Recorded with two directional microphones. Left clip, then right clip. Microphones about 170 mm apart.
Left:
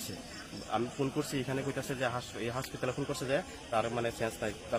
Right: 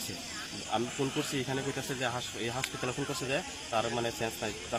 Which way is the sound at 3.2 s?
25° left (ahead or behind).